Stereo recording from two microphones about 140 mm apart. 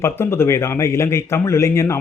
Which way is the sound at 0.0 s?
20° left (ahead or behind).